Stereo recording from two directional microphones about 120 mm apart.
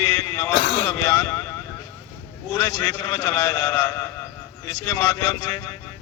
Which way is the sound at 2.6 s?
30° left (ahead or behind).